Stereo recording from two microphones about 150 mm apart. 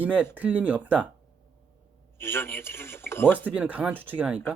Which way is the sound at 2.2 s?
15° left (ahead or behind).